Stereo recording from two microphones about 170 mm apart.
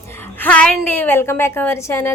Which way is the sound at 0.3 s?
10° left (ahead or behind).